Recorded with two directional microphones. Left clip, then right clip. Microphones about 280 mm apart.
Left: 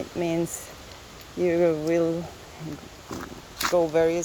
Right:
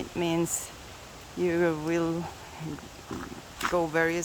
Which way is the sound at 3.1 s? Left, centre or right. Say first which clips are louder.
Left 2 dB; left.